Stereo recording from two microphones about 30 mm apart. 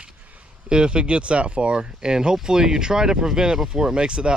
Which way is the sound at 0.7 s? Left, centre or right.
Right.